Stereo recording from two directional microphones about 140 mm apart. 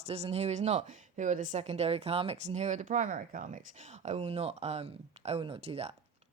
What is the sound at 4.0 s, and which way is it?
Speech, 50° right (ahead or behind).